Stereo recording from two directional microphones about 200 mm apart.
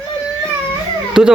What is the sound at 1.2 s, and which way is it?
Speech, 5° right (ahead or behind).